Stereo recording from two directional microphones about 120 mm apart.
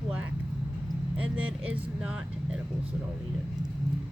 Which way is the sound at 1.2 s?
10° right (ahead or behind).